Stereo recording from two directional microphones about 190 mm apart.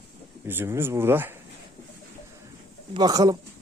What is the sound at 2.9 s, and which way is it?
Speech, 20° right (ahead or behind).